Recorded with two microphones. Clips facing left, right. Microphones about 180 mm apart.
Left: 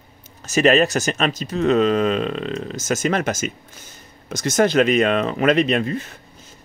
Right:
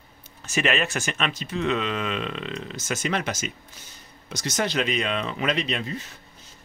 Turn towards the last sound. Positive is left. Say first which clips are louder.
# left 10 dB
turn(degrees=55)  # may be behind; listen again after turning